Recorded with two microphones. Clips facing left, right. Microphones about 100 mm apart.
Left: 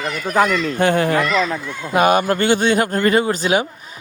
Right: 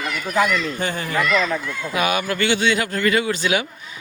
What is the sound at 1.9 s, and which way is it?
A man's voice, 45° left (ahead or behind).